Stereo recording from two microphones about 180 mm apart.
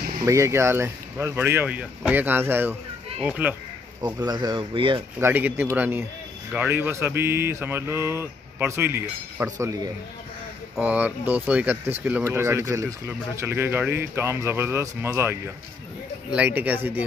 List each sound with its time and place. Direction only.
0.2 s speech: 15° right (ahead or behind)
4.0 s speech: 20° right (ahead or behind)
5.2 s speech: 10° right (ahead or behind)
10.8 s speech: 10° right (ahead or behind)